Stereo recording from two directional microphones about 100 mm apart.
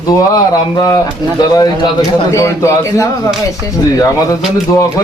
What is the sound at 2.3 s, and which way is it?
Speech, 30° left (ahead or behind).